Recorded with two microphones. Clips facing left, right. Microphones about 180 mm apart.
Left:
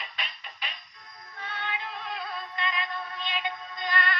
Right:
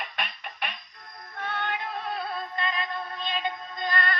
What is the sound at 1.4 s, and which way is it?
Synthetic singing, 60° right (ahead or behind).